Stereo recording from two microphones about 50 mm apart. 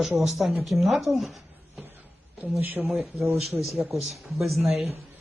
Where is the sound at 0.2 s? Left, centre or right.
Centre.